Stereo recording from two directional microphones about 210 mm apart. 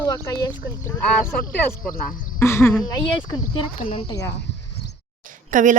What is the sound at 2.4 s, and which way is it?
Speech, 10° left (ahead or behind).